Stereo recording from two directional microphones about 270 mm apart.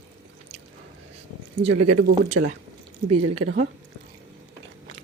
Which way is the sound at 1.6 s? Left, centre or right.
Right.